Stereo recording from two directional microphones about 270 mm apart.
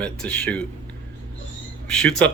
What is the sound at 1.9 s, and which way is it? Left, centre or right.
Speech, centre.